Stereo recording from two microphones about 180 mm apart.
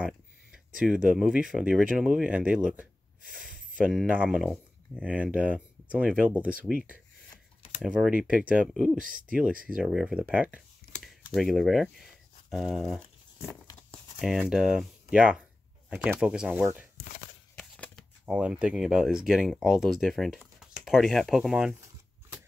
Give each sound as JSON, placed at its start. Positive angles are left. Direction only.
{"t": 1.0, "sound": "speech", "side_deg": -5}
{"t": 8.9, "sound": "speech", "side_deg": -50}
{"t": 9.8, "sound": "speech", "side_deg": -5}
{"t": 17.6, "sound": "shuffling cards", "side_deg": 5}
{"t": 18.2, "sound": "speech", "side_deg": -5}